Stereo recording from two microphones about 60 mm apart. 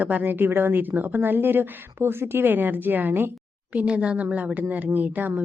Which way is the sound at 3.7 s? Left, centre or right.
Right.